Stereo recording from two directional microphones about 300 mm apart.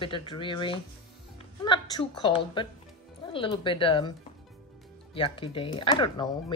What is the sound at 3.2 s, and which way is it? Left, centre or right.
Speech, centre.